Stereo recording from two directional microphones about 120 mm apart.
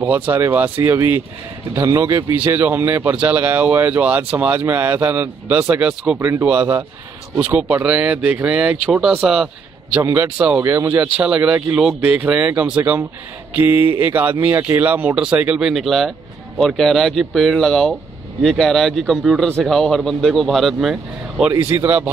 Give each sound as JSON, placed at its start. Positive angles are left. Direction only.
{"t": 0.1, "sound": "speech", "side_deg": -15}
{"t": 1.8, "sound": "speech", "side_deg": -30}
{"t": 2.3, "sound": "speech", "side_deg": -15}
{"t": 10.6, "sound": "speech", "side_deg": -25}
{"t": 11.0, "sound": "speech", "side_deg": -10}
{"t": 20.9, "sound": "speech", "side_deg": -10}